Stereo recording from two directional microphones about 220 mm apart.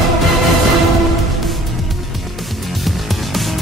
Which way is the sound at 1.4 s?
Centre (ahead or behind).